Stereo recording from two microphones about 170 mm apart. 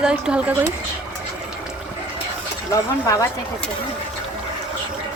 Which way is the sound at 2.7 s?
15° left (ahead or behind).